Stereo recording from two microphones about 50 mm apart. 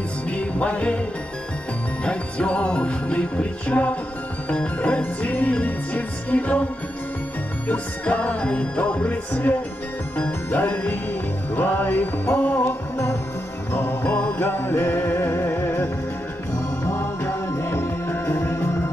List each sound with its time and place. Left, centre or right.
0.3 s music: left
2.0 s music: left
7.6 s music: left
12.9 s music: left
14.0 s music: left
14.4 s music: left
16.8 s music: left
18.4 s music: left